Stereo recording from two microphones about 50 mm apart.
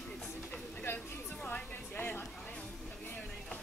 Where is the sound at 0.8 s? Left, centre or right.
Left.